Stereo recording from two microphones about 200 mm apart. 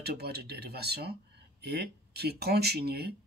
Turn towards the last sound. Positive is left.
turn(degrees=-55)  # may be behind; listen again after turning